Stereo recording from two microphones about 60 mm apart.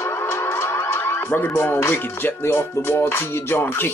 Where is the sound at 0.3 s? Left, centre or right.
Left.